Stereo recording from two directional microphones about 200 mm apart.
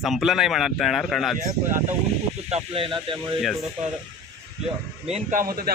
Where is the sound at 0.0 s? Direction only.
Centre (ahead or behind).